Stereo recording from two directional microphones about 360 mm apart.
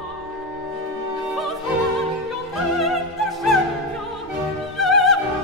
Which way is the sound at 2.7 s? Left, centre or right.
Centre.